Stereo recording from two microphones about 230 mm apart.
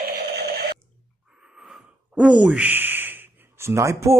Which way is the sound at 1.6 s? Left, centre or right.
Centre.